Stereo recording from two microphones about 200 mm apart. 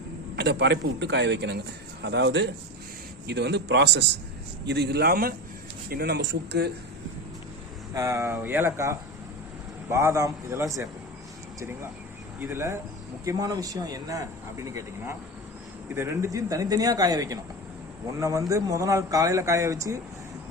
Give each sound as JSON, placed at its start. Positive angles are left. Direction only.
{"t": 0.3, "sound": "a man's voice", "side_deg": -60}
{"t": 7.9, "sound": "speech", "side_deg": -15}
{"t": 12.4, "sound": "speech", "side_deg": -10}